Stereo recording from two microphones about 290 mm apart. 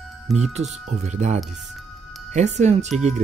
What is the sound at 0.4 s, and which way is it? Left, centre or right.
Speech, right.